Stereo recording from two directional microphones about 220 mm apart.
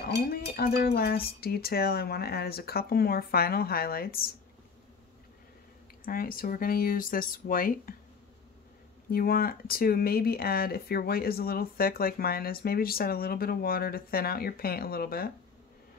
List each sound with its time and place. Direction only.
0.0 s speech: 45° left (ahead or behind)
6.0 s speech: 40° left (ahead or behind)
9.1 s speech: 40° left (ahead or behind)